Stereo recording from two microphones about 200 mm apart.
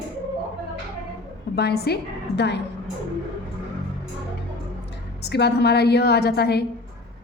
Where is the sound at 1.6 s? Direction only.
55° left (ahead or behind).